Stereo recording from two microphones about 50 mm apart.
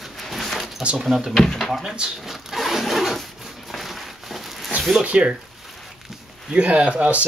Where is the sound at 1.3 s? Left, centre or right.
Centre.